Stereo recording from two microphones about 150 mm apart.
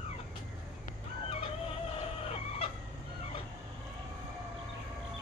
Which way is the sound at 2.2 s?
40° left (ahead or behind).